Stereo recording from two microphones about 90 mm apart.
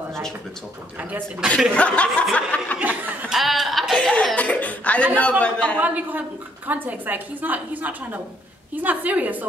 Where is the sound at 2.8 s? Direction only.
15° right (ahead or behind).